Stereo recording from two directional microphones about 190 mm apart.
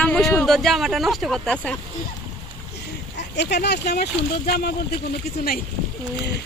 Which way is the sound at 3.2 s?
60° left (ahead or behind).